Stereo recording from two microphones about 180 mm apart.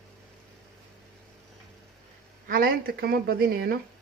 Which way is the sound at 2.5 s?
55° right (ahead or behind).